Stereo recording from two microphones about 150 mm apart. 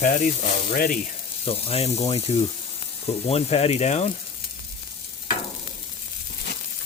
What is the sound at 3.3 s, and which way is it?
Speech, 40° left (ahead or behind).